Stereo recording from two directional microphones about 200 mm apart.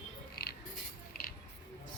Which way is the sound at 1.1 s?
50° left (ahead or behind).